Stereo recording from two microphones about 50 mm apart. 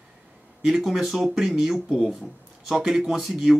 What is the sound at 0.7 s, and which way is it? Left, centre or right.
Speech, centre.